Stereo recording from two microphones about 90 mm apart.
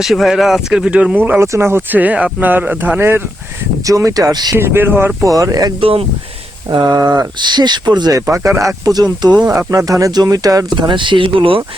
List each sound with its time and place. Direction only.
0.0 s speech: 5° right (ahead or behind); by 3.2 s 25° right (ahead or behind)
3.8 s speech: 40° right (ahead or behind)
4.5 s speech: 25° right (ahead or behind)
5.2 s speech: 40° right (ahead or behind)
5.8 s speech: 90° right
6.7 s speech: 55° right (ahead or behind)
10.8 s speech: 65° right (ahead or behind)